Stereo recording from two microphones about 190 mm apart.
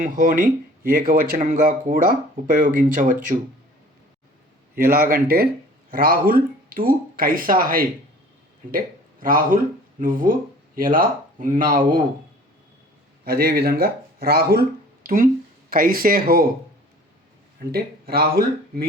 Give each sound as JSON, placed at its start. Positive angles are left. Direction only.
{"t": 0.0, "sound": "speech", "side_deg": -45}
{"t": 4.7, "sound": "speech", "side_deg": -50}
{"t": 9.2, "sound": "speech", "side_deg": -50}
{"t": 13.2, "sound": "speech", "side_deg": -55}
{"t": 17.7, "sound": "speech", "side_deg": -55}